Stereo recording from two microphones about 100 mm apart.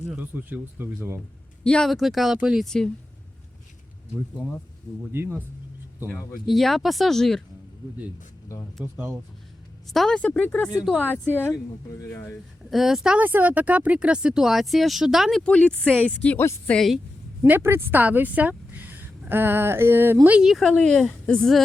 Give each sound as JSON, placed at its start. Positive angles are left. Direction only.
{"t": 0.2, "sound": "speech", "side_deg": -15}
{"t": 1.6, "sound": "speech", "side_deg": 5}
{"t": 2.6, "sound": "speech", "side_deg": 5}
{"t": 5.1, "sound": "speech", "side_deg": -25}
{"t": 6.4, "sound": "speech", "side_deg": 0}
{"t": 8.8, "sound": "speech", "side_deg": -15}
{"t": 9.9, "sound": "speech", "side_deg": 0}
{"t": 10.2, "sound": "speech", "side_deg": 15}
{"t": 11.9, "sound": "speech", "side_deg": 25}
{"t": 12.7, "sound": "speech", "side_deg": -5}
{"t": 13.1, "sound": "speech", "side_deg": -20}
{"t": 15.4, "sound": "speech", "side_deg": 10}
{"t": 17.4, "sound": "speech", "side_deg": -20}
{"t": 20.5, "sound": "speech", "side_deg": 0}